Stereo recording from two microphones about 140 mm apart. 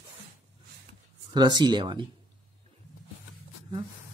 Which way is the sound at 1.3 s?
30° right (ahead or behind).